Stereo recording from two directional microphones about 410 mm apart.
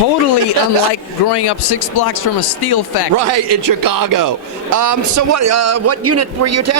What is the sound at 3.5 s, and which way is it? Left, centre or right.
A man's voice, right.